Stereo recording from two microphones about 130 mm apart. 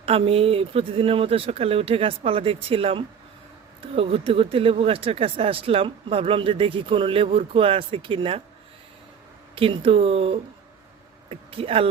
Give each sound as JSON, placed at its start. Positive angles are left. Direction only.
{"t": 0.0, "sound": "speech", "side_deg": -50}
{"t": 9.6, "sound": "speech", "side_deg": -45}